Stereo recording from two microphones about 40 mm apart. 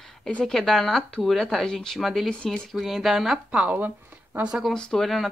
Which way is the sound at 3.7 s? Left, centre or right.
Right.